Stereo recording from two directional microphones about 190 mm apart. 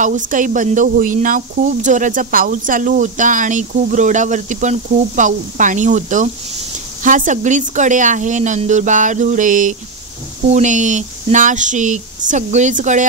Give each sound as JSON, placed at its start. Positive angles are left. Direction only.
{"t": 0.0, "sound": "speech", "side_deg": -40}